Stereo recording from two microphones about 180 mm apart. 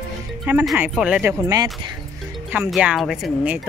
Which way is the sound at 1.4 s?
20° right (ahead or behind).